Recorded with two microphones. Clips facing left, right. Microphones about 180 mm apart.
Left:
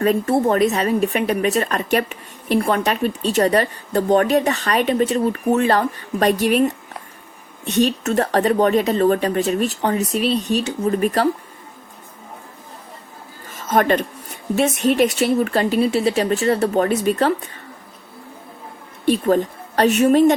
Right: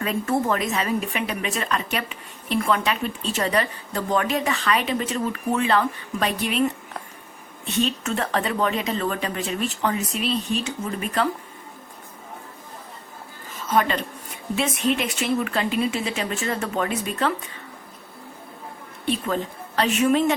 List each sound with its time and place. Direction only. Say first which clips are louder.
0.0 s speech: left 7 dB; 35° left (ahead or behind)
8.0 s speech: left 8 dB; 40° left (ahead or behind)
13.5 s a sound: left 5 dB; 50° left (ahead or behind)
14.5 s speech: left 6 dB; 45° left (ahead or behind)
19.0 s a woman's voice: left 8 dB; 45° left (ahead or behind)